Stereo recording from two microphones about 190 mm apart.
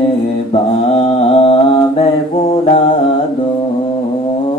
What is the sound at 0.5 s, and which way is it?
Mantra, 30° left (ahead or behind).